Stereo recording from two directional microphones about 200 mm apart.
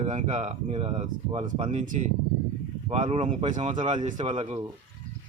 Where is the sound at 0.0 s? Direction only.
35° right (ahead or behind).